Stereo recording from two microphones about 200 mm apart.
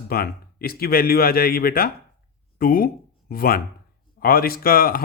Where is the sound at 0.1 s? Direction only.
50° left (ahead or behind).